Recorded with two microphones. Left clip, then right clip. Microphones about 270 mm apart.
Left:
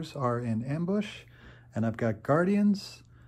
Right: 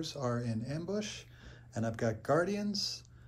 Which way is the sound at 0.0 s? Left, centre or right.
Left.